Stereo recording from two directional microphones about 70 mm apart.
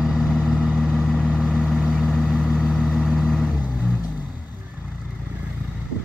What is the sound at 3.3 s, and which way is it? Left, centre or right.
Vehicle, centre.